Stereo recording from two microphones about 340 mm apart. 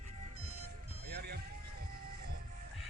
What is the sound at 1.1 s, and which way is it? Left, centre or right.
Vehicle, right.